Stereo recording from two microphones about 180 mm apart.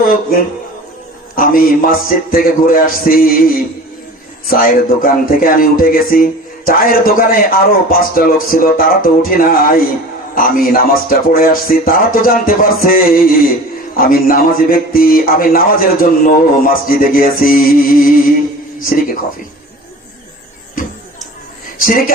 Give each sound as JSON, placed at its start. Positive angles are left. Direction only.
{"t": 0.0, "sound": "a man's voice", "side_deg": 55}
{"t": 21.8, "sound": "a man's voice", "side_deg": 50}